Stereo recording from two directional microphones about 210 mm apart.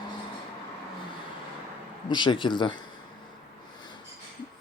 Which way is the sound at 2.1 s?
20° left (ahead or behind).